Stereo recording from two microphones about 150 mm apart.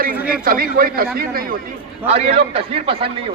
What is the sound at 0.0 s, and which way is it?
A man's voice, 75° right (ahead or behind).